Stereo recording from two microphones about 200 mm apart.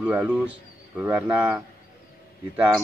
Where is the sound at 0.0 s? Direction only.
5° right (ahead or behind).